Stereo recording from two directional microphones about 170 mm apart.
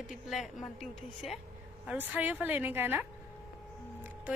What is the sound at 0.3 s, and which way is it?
A woman's voice, centre (ahead or behind).